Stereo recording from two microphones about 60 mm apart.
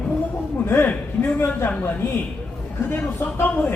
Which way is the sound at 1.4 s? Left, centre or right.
Left.